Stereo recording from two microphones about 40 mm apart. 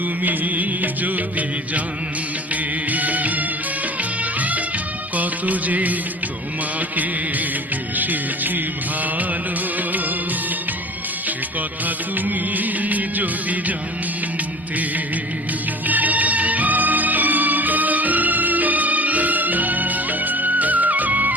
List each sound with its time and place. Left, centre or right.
0.2 s music: right
2.9 s music: right
5.1 s music of bollywood: right
6.7 s music: right
11.9 s music: right
15.9 s music: right